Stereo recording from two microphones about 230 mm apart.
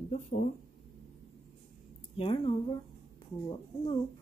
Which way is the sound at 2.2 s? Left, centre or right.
Left.